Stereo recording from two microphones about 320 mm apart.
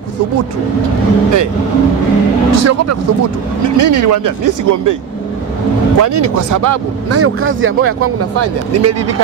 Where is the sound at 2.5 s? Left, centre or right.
Right.